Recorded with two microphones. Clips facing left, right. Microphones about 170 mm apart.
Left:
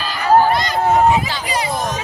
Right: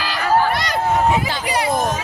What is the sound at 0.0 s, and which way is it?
Crowd, 75° right (ahead or behind).